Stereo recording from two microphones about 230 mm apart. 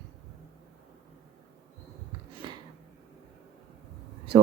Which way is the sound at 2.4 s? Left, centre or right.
Centre.